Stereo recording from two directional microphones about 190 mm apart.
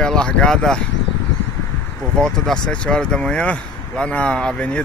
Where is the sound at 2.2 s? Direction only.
5° left (ahead or behind).